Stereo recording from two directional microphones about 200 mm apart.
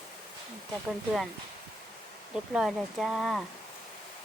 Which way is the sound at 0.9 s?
Centre (ahead or behind).